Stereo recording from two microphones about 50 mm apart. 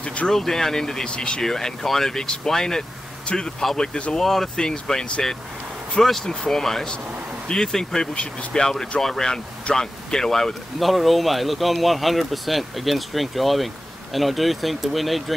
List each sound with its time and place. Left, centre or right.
0.0 s speech: left
0.3 s speech: centre
4.6 s speech: centre
10.8 s speech: centre